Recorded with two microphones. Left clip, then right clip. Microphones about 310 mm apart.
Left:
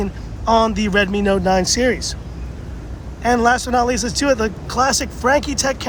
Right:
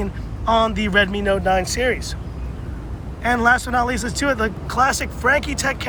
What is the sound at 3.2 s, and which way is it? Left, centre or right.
Speech, centre.